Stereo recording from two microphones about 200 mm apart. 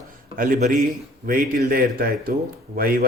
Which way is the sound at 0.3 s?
40° right (ahead or behind).